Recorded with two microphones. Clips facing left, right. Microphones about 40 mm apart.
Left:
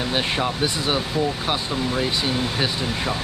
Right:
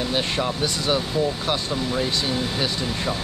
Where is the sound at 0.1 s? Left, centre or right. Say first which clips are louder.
Left 1 dB; centre.